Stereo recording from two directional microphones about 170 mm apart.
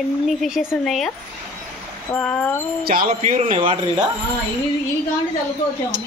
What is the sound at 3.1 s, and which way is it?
Speech, 45° right (ahead or behind).